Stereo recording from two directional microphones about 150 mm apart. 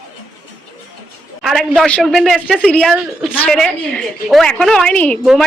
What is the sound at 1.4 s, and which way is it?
A man's voice, centre (ahead or behind).